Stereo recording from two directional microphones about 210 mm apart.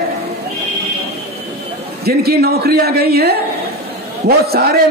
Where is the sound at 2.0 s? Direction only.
50° right (ahead or behind).